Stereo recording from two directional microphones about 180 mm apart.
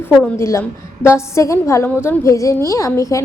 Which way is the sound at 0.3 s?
15° left (ahead or behind).